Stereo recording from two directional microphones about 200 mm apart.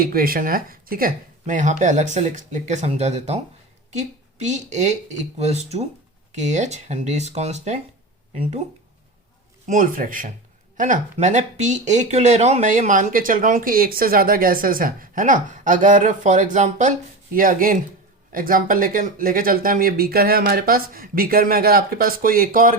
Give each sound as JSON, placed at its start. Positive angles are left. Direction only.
{"t": 0.0, "sound": "a woman's voice", "side_deg": -45}
{"t": 9.6, "sound": "speech", "side_deg": -45}